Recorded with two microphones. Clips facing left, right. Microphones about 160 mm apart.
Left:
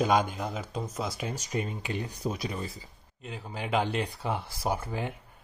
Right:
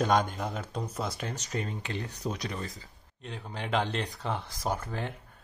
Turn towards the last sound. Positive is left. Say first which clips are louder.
# left 2 dB
turn(degrees=10)  # may be behind; listen again after turning